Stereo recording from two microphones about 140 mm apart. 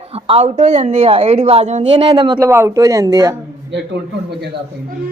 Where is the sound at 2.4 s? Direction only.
20° right (ahead or behind).